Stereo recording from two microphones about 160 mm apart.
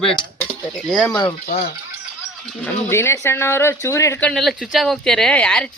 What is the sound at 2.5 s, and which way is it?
Speech, 10° left (ahead or behind).